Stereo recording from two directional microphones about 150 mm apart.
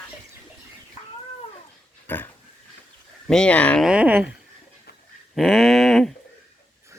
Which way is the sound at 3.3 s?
5° left (ahead or behind).